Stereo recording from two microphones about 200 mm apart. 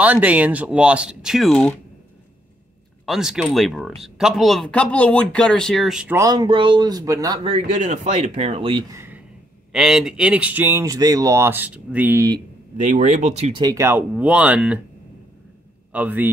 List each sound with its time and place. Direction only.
0.0 s speech: 5° right (ahead or behind)
3.1 s speech: centre (ahead or behind)
6.1 s speech: 20° right (ahead or behind)
8.9 s a sound: 10° right (ahead or behind)
9.7 s speech: 5° right (ahead or behind)
12.7 s speech: 40° right (ahead or behind)
13.6 s speech: 15° right (ahead or behind)
15.9 s speech: 5° right (ahead or behind)